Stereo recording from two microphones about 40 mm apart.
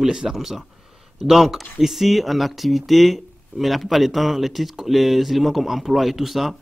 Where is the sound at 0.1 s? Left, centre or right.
Centre.